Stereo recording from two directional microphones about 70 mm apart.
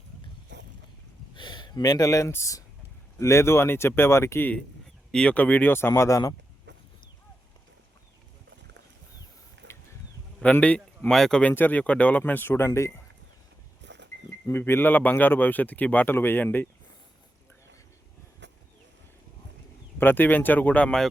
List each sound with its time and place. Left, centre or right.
1.4 s a sound: left
2.3 s speech: left
5.1 s speech: centre
5.9 s speech: left
10.4 s speech: centre
11.5 s speech: left
14.6 s speech: left
20.0 s speech: left